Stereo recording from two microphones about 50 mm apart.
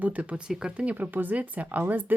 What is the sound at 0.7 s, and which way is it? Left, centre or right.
Speech, right.